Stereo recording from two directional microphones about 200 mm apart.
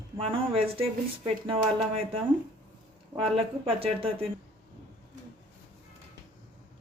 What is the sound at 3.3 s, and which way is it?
Speech, 30° right (ahead or behind).